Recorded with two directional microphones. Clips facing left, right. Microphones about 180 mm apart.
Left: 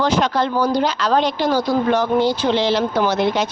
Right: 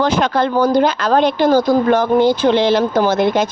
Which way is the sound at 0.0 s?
55° right (ahead or behind).